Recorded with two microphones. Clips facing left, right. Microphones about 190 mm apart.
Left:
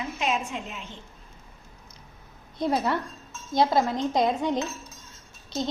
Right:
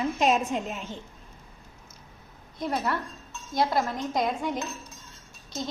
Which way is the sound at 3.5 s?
25° left (ahead or behind).